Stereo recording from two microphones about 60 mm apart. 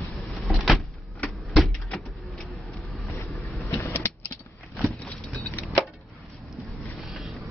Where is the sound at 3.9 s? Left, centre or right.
Left.